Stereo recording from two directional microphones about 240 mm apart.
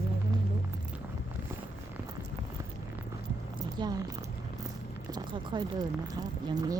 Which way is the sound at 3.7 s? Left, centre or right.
Centre.